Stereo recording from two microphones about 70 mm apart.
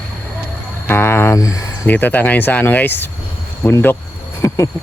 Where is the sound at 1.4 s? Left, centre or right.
Left.